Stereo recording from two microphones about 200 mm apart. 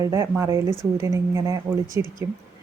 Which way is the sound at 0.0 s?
15° right (ahead or behind).